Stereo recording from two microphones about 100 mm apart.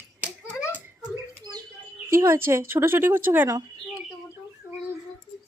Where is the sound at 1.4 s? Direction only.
45° right (ahead or behind).